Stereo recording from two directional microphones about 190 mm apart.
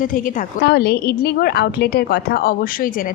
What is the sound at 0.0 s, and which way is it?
A woman's voice, 45° left (ahead or behind).